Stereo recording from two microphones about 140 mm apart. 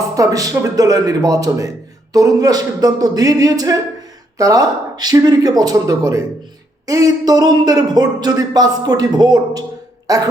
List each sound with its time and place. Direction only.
0.2 s speech: 25° right (ahead or behind)